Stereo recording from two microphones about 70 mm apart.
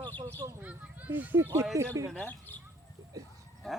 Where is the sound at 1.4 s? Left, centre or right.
Right.